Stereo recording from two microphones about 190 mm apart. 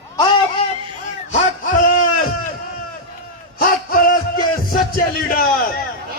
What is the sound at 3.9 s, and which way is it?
Music, 50° left (ahead or behind).